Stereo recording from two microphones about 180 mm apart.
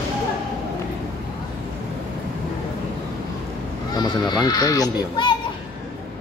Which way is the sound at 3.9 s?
20° left (ahead or behind).